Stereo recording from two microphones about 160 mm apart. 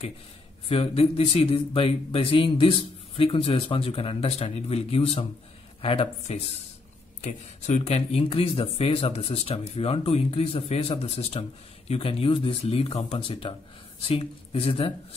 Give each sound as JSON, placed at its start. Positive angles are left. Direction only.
{"t": 0.7, "sound": "speech", "side_deg": 40}